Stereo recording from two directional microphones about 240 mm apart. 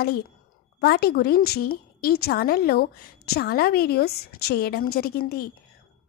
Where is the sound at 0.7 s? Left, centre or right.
Left.